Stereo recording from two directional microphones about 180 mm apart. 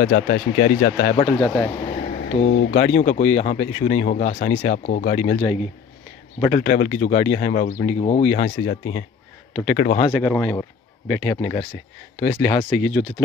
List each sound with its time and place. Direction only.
0.0 s speech: 70° left (ahead or behind)
1.1 s speech: 25° left (ahead or behind)
1.4 s speech: 15° left (ahead or behind)
1.9 s a sound: 45° left (ahead or behind)
2.1 s speech: 80° left
2.7 s speech: 45° left (ahead or behind)
6.5 s speech: 45° left (ahead or behind)
8.4 s speech: 55° left (ahead or behind)
10.1 s a man's voice: 10° left (ahead or behind)